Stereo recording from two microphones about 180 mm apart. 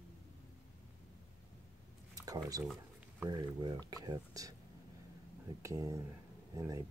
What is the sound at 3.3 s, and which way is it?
Speech, 20° right (ahead or behind).